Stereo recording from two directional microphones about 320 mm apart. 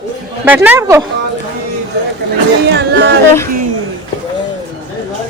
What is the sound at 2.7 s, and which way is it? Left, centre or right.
Speech, right.